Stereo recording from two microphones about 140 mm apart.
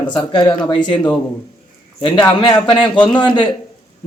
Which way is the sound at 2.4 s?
35° left (ahead or behind).